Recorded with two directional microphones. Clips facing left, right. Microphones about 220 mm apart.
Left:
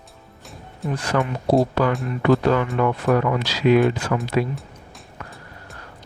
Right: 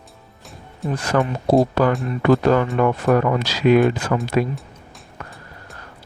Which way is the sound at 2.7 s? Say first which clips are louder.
Right 2 dB; 45° right (ahead or behind).